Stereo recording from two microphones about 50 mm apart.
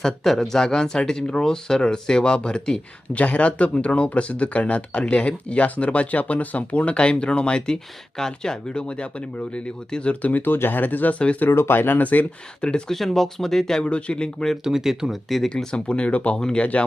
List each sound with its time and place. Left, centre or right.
0.0 s speech: centre
3.2 s speech: left
10.4 s speech: left
11.5 s speech: left
12.9 s speech: centre
13.8 s speech: left
14.6 s speech: centre
15.4 s speech: centre
16.4 s speech: centre